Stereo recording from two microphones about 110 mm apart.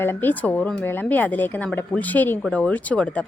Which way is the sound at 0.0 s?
20° left (ahead or behind).